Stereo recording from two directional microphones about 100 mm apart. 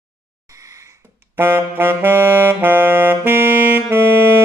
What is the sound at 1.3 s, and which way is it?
Saxophone, 20° right (ahead or behind).